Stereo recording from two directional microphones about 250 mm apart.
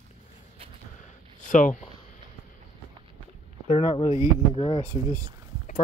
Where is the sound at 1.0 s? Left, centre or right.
Left.